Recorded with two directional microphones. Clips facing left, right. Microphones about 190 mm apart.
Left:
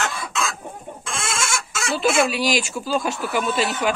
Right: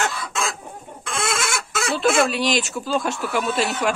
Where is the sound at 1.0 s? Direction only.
60° right (ahead or behind).